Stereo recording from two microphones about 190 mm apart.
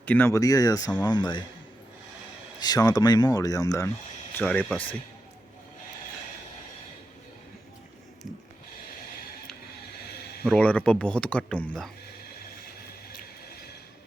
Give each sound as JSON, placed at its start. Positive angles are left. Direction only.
{"t": 0.0, "sound": "speech", "side_deg": 10}
{"t": 2.6, "sound": "speech", "side_deg": 20}
{"t": 4.4, "sound": "speech", "side_deg": 5}
{"t": 10.4, "sound": "speech", "side_deg": 5}